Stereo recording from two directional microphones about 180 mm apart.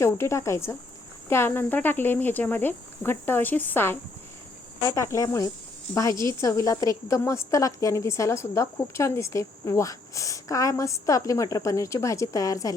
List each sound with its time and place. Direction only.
0.0 s a woman's voice: 15° left (ahead or behind)